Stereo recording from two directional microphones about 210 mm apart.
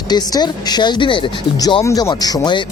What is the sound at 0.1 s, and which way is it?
Speech, 20° left (ahead or behind).